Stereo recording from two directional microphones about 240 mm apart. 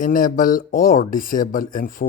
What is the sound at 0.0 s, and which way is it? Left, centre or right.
Speech, left.